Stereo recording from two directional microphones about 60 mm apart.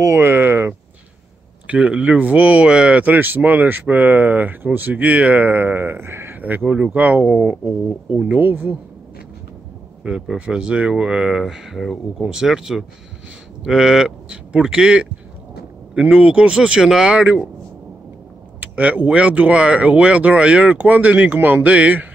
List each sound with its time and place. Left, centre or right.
0.0 s a sound: right
1.7 s speech: right
6.3 s speech: right
10.0 s speech: centre
18.6 s speech: right
21.6 s speech: right